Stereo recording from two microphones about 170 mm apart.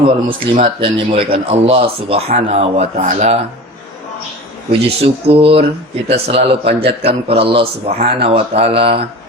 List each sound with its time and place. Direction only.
0.5 s speech: 30° right (ahead or behind)
4.7 s speech: 35° right (ahead or behind)